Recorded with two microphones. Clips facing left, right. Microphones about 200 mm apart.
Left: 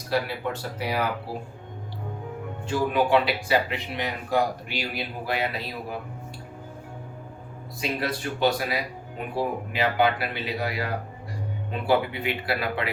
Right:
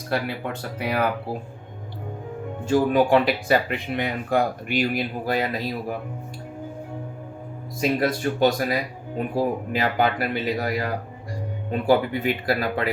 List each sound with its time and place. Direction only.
0.1 s speech: 55° right (ahead or behind)
2.6 s speech: 45° right (ahead or behind)
7.8 s speech: 45° right (ahead or behind)